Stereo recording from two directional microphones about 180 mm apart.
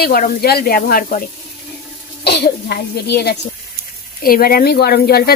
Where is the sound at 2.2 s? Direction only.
65° left (ahead or behind).